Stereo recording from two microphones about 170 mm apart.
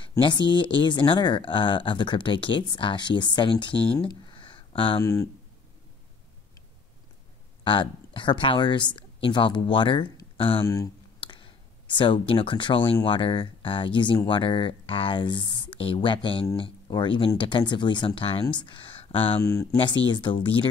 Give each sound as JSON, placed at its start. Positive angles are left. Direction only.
{"t": 0.2, "sound": "speech", "side_deg": 25}
{"t": 3.7, "sound": "speech", "side_deg": 10}
{"t": 4.0, "sound": "a sound", "side_deg": 30}
{"t": 5.0, "sound": "speech", "side_deg": 20}
{"t": 7.6, "sound": "speech", "side_deg": 30}
{"t": 10.6, "sound": "speech", "side_deg": 20}
{"t": 19.4, "sound": "speech", "side_deg": 20}